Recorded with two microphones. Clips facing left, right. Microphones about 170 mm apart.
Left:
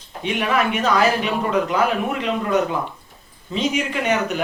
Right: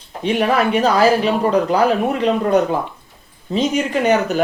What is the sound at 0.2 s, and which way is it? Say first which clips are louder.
Speech: right 4 dB; 35° right (ahead or behind).